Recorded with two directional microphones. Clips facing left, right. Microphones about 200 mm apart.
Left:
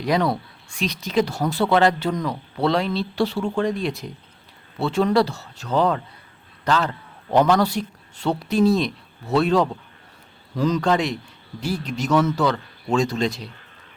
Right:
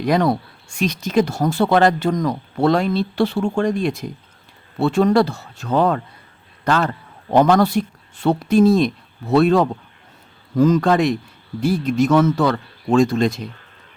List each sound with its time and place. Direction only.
0.0 s speech: 50° right (ahead or behind)